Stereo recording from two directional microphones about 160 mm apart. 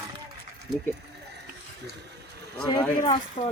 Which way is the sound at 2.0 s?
90° right.